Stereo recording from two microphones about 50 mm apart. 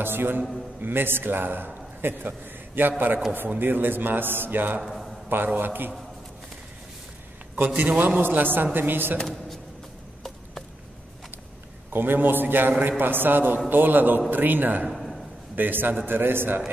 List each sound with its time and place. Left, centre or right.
0.0 s a man's voice: right
4.8 s a man's voice: centre
5.3 s a man's voice: right
7.5 s a man's voice: right
9.2 s speech: centre
11.9 s a man's voice: right
14.9 s a sound: centre
15.5 s a man's voice: right